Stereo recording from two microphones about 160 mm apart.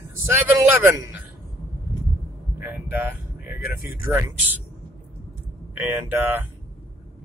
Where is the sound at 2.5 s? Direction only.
10° right (ahead or behind).